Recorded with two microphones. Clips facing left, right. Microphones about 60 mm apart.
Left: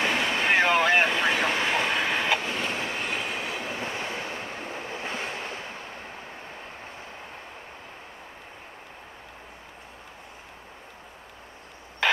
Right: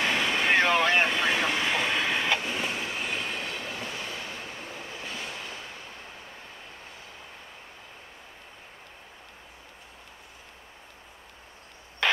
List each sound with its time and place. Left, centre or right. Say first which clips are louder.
0.0 s vehicle: left 1 dB; left
0.5 s vehicle: left 2 dB; centre
1.8 s train: left 2 dB; left
2.0 s vehicle: left 2 dB; centre
2.7 s train: left 2 dB; left
3.0 s train: left 2 dB; centre
3.6 s train: left 4 dB; left